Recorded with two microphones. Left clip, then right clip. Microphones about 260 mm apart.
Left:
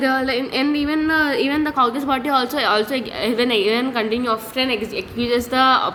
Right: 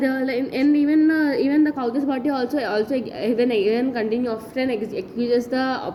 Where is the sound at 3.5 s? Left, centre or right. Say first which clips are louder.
Left 2 dB; left.